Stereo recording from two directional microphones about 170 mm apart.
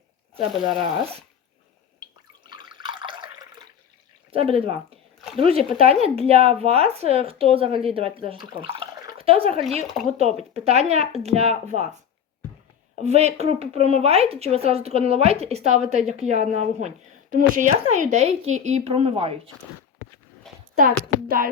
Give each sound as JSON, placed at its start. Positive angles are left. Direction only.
{"t": 2.5, "sound": "drip", "side_deg": -25}
{"t": 4.3, "sound": "speech", "side_deg": -35}
{"t": 9.8, "sound": "speech", "side_deg": 0}
{"t": 10.2, "sound": "speech", "side_deg": -35}
{"t": 13.0, "sound": "speech", "side_deg": -40}
{"t": 21.2, "sound": "music", "side_deg": -55}